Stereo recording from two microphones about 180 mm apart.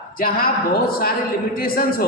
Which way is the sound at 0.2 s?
55° left (ahead or behind).